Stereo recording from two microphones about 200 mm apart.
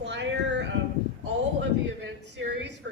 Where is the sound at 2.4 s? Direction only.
60° right (ahead or behind).